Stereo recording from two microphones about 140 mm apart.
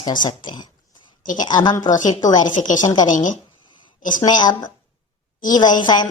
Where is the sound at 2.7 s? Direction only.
30° left (ahead or behind).